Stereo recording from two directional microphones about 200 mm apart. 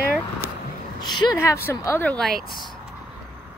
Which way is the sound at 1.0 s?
20° left (ahead or behind).